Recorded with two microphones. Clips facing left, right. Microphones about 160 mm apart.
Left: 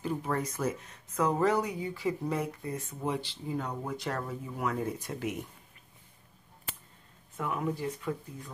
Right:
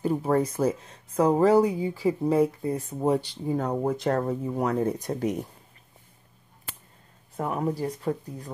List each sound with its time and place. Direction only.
0.0 s speech: 35° right (ahead or behind)
7.3 s speech: 35° right (ahead or behind)